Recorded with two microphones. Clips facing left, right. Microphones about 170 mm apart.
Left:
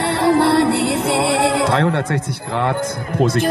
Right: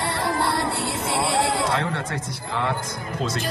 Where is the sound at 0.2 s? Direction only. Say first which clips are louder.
Left 12 dB; 70° left (ahead or behind).